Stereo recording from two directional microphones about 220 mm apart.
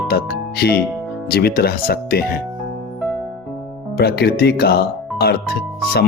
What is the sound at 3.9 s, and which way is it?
Speech, 45° left (ahead or behind).